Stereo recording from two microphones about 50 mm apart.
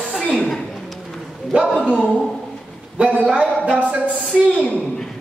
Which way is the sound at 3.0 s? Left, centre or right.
Right.